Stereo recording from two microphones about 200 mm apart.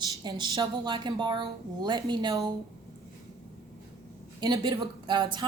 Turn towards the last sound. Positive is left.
turn(degrees=-20)  # may be behind; listen again after turning